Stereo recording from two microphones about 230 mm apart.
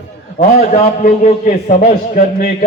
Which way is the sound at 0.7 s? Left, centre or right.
Left.